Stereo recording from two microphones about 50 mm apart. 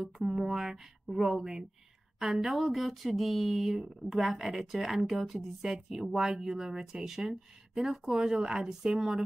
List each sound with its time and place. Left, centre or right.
0.2 s speech: centre